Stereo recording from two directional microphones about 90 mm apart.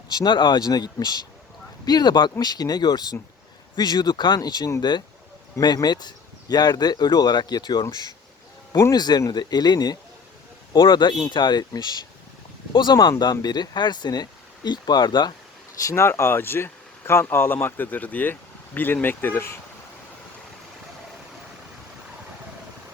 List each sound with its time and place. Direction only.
0.1 s speech: 55° left (ahead or behind)
8.7 s speech: 30° left (ahead or behind)
9.0 s speech: 50° left (ahead or behind)
15.8 s speech: 35° left (ahead or behind)